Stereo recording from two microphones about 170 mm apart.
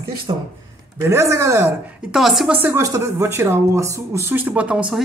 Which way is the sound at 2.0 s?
Centre (ahead or behind).